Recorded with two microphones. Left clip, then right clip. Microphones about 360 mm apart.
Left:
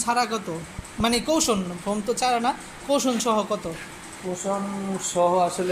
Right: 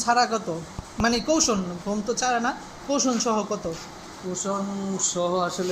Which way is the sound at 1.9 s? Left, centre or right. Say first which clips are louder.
Left 2 dB; centre.